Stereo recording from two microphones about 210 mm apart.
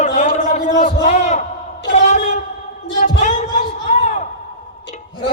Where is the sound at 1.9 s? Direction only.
35° left (ahead or behind).